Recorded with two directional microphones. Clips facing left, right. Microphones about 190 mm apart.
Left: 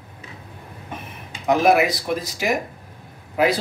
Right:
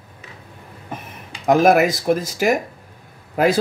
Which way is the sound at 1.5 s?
50° right (ahead or behind).